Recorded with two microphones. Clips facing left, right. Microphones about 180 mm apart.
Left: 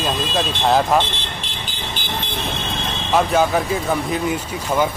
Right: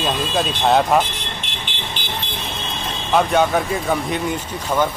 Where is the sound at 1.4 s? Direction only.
35° left (ahead or behind).